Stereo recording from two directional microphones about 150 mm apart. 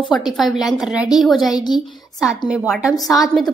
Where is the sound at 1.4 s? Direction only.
25° left (ahead or behind).